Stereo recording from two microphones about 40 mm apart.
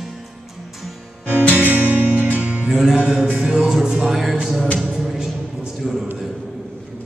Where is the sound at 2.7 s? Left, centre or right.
Centre.